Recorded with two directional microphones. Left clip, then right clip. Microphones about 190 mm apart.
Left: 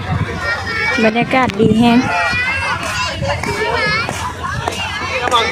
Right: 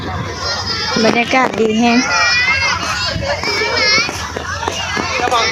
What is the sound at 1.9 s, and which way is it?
Children playing, 50° left (ahead or behind).